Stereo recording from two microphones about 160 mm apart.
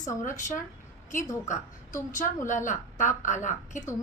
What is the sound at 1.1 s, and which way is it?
A woman's voice, 50° left (ahead or behind).